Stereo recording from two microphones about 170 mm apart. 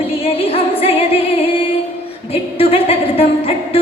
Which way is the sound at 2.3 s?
35° left (ahead or behind).